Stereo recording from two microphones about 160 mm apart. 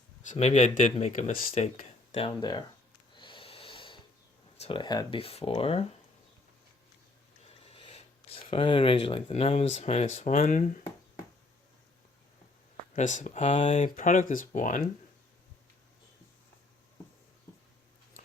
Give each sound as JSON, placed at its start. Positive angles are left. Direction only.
{"t": 0.3, "sound": "speech", "side_deg": 45}
{"t": 2.2, "sound": "speech", "side_deg": 25}
{"t": 3.2, "sound": "snort", "side_deg": 30}
{"t": 4.5, "sound": "speech", "side_deg": 35}
{"t": 7.4, "sound": "speech", "side_deg": 35}
{"t": 13.0, "sound": "speech", "side_deg": 50}
{"t": 13.7, "sound": "speech", "side_deg": 50}